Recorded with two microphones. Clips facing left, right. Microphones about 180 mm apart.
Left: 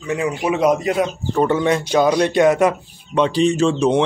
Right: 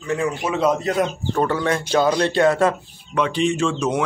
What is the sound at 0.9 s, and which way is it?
Speech, centre (ahead or behind).